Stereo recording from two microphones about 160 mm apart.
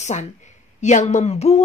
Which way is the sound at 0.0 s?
45° left (ahead or behind).